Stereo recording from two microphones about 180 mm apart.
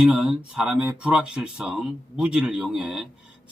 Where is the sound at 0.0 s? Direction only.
5° right (ahead or behind).